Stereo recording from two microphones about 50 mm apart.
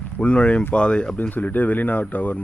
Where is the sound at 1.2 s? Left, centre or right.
Left.